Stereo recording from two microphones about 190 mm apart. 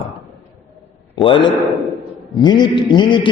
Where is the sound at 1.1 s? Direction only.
25° left (ahead or behind).